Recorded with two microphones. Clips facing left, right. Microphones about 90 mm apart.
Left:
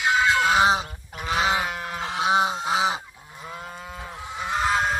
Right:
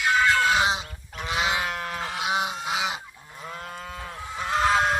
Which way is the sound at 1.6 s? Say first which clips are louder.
Even; 5° left (ahead or behind).